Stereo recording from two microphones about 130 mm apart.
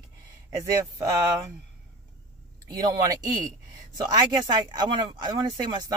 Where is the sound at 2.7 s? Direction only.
25° right (ahead or behind).